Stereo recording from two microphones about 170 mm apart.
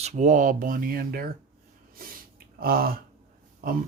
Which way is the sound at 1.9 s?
60° right (ahead or behind).